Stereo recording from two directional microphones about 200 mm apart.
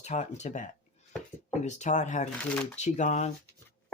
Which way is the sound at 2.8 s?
35° left (ahead or behind).